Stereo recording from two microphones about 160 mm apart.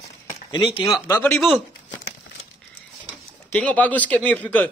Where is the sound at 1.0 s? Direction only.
20° left (ahead or behind).